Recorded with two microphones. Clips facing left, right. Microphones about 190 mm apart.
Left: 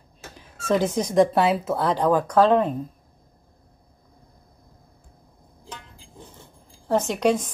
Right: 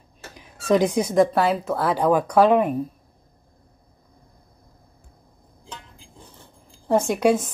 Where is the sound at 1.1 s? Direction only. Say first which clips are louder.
Left 2 dB; centre (ahead or behind).